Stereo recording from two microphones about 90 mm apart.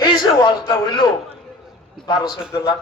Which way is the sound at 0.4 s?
65° left (ahead or behind).